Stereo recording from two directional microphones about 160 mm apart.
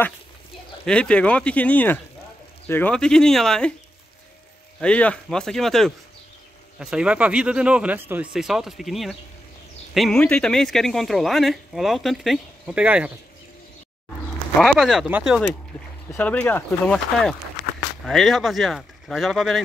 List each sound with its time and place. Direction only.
0.8 s speech: 5° left (ahead or behind)
4.7 s speech: 5° left (ahead or behind); by 13.1 s 10° right (ahead or behind)
14.6 s speech: centre (ahead or behind)
16.1 s speech: 10° left (ahead or behind)
17.6 s a sound: 55° left (ahead or behind)
18.0 s speech: centre (ahead or behind)